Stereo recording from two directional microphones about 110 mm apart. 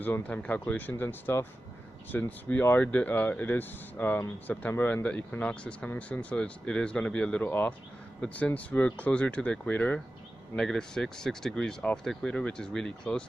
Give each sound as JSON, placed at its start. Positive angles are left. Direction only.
{"t": 0.0, "sound": "speech", "side_deg": 15}